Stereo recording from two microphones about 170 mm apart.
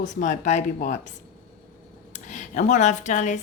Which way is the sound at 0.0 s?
45° left (ahead or behind).